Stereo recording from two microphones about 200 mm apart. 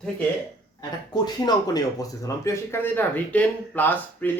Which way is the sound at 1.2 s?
20° left (ahead or behind).